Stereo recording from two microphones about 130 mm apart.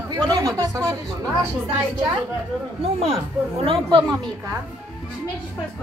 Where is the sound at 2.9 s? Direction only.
45° right (ahead or behind).